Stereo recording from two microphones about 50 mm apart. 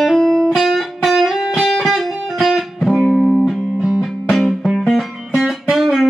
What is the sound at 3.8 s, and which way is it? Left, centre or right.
Music, centre.